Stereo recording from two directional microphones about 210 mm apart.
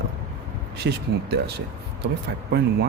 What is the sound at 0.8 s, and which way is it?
Speech, 50° right (ahead or behind).